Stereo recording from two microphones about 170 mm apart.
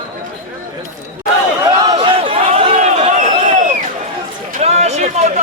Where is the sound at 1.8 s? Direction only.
25° right (ahead or behind).